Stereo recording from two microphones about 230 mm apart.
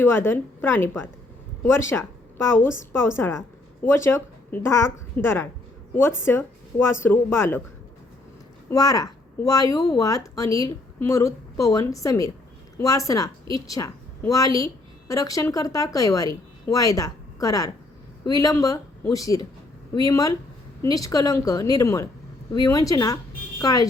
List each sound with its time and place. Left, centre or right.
0.0 s a woman's voice: centre
8.7 s a woman's voice: centre